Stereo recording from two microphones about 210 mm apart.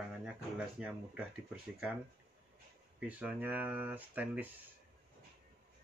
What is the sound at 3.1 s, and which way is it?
Speech, 5° right (ahead or behind).